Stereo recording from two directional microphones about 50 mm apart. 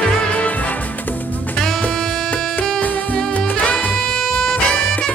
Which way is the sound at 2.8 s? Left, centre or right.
Left.